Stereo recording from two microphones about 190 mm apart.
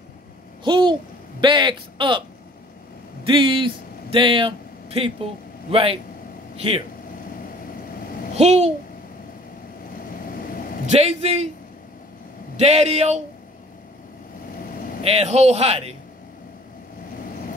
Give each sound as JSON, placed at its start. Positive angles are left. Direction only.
{"t": 0.7, "sound": "a sound", "side_deg": -25}
{"t": 1.4, "sound": "a man's voice", "side_deg": -25}
{"t": 3.3, "sound": "a man's voice", "side_deg": -25}
{"t": 8.4, "sound": "a man's voice", "side_deg": -35}
{"t": 10.2, "sound": "vehicle", "side_deg": 50}
{"t": 11.0, "sound": "a man's voice", "side_deg": -35}
{"t": 12.5, "sound": "a man's voice", "side_deg": -35}
{"t": 15.0, "sound": "a man's voice", "side_deg": -35}